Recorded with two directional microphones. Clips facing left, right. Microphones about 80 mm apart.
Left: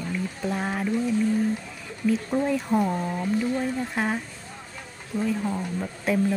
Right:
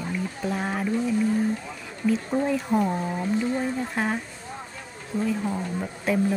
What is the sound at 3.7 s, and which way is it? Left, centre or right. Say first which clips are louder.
A woman's voice: even; centre.